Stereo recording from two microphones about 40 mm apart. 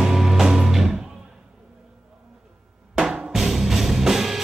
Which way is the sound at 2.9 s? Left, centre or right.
Centre.